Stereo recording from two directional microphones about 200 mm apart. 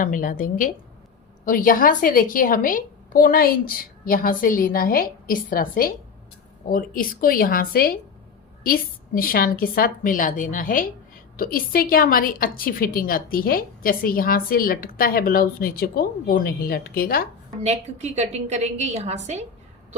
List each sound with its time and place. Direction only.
0.0 s a woman's voice: 40° left (ahead or behind)
17.6 s a woman's voice: 35° right (ahead or behind)